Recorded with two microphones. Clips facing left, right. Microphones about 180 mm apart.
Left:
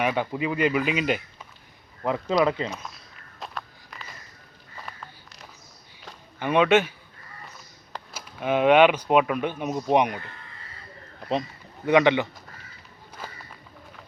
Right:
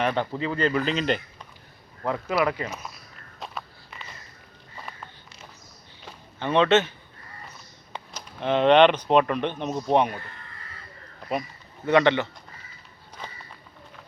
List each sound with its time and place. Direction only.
0.0 s speech: 10° left (ahead or behind)
2.4 s speech: 20° left (ahead or behind)
3.4 s walk: centre (ahead or behind)
4.8 s a sound: centre (ahead or behind)
6.4 s speech: 10° left (ahead or behind)
7.9 s speech: 10° left (ahead or behind)
11.9 s speech: 15° left (ahead or behind)
13.2 s run: 5° left (ahead or behind)